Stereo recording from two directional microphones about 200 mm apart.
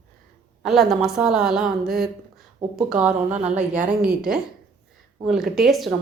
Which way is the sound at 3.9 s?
5° right (ahead or behind).